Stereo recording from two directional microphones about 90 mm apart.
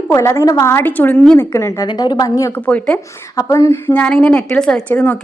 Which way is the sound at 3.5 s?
30° left (ahead or behind).